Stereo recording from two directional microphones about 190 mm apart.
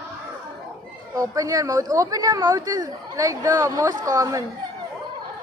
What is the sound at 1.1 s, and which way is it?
A woman's voice, 15° right (ahead or behind).